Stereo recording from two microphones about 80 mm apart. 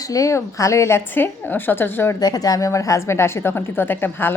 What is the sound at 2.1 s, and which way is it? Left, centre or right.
A woman's voice, left.